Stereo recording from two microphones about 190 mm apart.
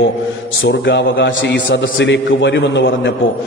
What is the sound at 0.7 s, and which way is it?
A man's voice, 70° left (ahead or behind).